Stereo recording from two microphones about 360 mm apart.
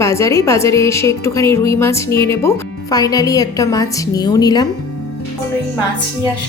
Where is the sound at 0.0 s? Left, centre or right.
Centre.